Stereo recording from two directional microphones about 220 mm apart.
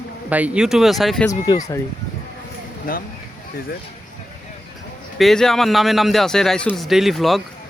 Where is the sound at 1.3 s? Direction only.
15° left (ahead or behind).